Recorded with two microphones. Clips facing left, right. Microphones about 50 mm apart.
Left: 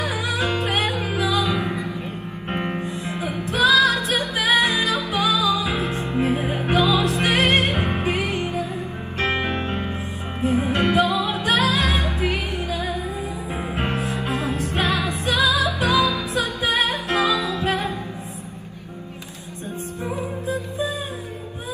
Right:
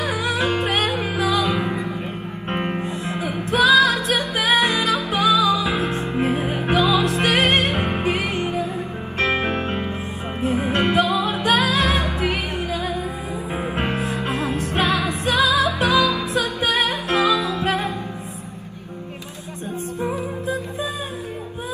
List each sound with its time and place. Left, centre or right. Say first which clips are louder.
0.0 s music: right 2 dB; right
20.0 s music: right 2 dB; right